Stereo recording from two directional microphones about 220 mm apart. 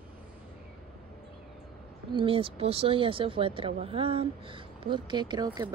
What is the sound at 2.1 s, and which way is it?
Speech, 25° right (ahead or behind).